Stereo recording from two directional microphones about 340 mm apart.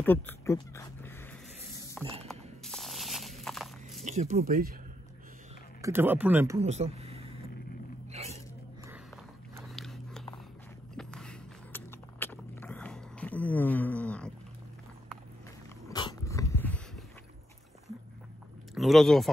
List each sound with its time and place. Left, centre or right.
0.0 s speech: centre
2.2 s a sound: centre
4.0 s speech: centre
5.8 s speech: centre
8.1 s a sound: centre
9.6 s biting: centre
11.0 s a sound: centre
15.9 s dog: centre
18.8 s speech: centre